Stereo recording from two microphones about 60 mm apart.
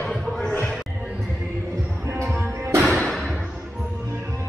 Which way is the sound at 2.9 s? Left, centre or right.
Centre.